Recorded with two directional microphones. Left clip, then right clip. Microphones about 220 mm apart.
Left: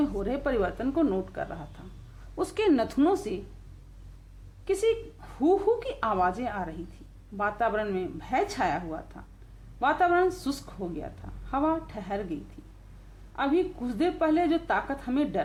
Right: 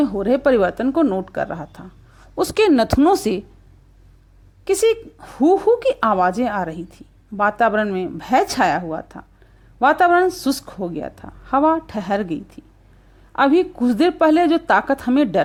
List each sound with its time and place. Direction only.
0.0 s a woman's voice: 35° right (ahead or behind)
4.6 s a woman's voice: 40° right (ahead or behind)